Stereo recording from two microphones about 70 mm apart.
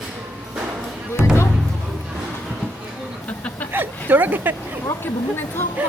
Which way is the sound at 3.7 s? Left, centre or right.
Right.